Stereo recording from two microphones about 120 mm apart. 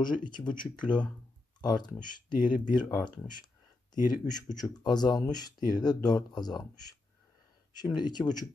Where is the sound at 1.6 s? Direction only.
35° left (ahead or behind).